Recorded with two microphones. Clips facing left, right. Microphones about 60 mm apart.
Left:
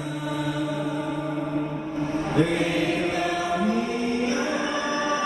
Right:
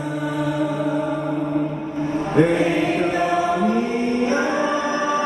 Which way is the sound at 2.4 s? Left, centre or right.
Right.